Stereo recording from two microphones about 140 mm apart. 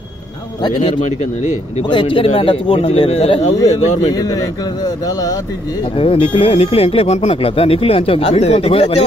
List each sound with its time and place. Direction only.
0.6 s a man's voice: 30° left (ahead or behind)
1.2 s speech: 55° left (ahead or behind)
1.9 s a man's voice: 35° left (ahead or behind); by 4.1 s 50° left (ahead or behind)
4.1 s speech: 30° left (ahead or behind)
5.9 s speech: 40° left (ahead or behind)